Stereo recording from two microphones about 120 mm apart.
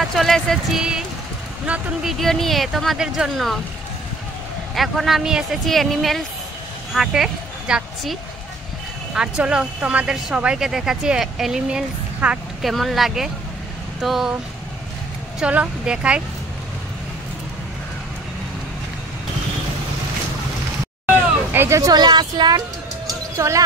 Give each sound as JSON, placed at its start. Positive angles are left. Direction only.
{"t": 0.0, "sound": "speech", "side_deg": 0}
{"t": 4.7, "sound": "speech", "side_deg": 0}
{"t": 15.4, "sound": "speech", "side_deg": -10}
{"t": 21.1, "sound": "speech", "side_deg": -20}
{"t": 23.3, "sound": "speech", "side_deg": -25}